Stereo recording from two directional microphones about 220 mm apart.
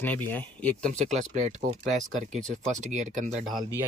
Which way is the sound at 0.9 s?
35° right (ahead or behind).